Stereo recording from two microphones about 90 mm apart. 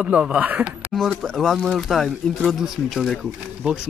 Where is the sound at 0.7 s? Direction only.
Centre (ahead or behind).